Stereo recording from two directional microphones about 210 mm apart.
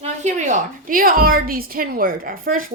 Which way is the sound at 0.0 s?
35° right (ahead or behind).